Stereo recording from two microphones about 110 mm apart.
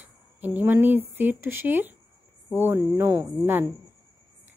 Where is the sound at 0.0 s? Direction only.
15° right (ahead or behind).